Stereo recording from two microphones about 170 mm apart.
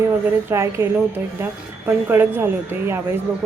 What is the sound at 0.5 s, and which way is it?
Speech, 15° right (ahead or behind).